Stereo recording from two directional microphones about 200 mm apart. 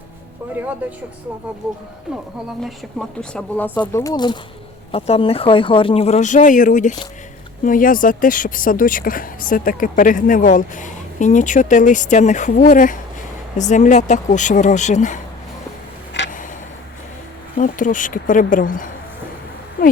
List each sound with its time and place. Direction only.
0.5 s speech: 10° right (ahead or behind)
2.6 s speech: centre (ahead or behind)
3.8 s speech: 20° left (ahead or behind); by 15.2 s 40° left (ahead or behind)
16.1 s a sound: 60° left (ahead or behind)
17.6 s speech: 40° left (ahead or behind)